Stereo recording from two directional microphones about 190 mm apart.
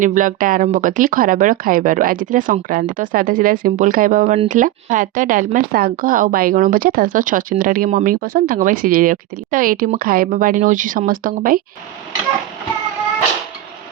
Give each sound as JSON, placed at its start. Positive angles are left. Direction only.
{"t": 0.0, "sound": "speech", "side_deg": -45}